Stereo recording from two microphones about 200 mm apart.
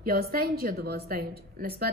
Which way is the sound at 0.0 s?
50° right (ahead or behind).